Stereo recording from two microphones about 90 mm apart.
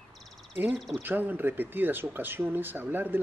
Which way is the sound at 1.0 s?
20° right (ahead or behind).